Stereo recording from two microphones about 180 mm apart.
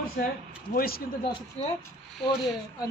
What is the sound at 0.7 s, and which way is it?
Speech, 55° left (ahead or behind).